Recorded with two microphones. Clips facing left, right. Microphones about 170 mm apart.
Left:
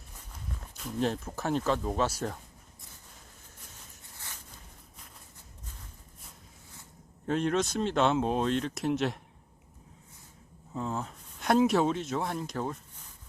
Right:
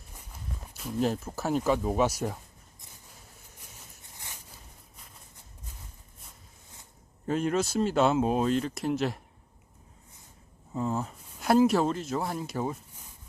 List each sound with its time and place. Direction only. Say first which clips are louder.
0.6 s speech: right 2 dB; 5° right (ahead or behind)
4.0 s a sound: right 1 dB; 15° right (ahead or behind)
7.3 s speech: right 1 dB; 5° right (ahead or behind)
10.8 s speech: right 4 dB; 5° right (ahead or behind)